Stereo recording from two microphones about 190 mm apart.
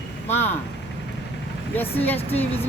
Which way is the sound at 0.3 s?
10° left (ahead or behind).